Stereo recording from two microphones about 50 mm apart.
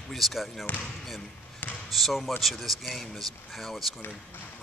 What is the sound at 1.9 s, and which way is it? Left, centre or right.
Speech, centre.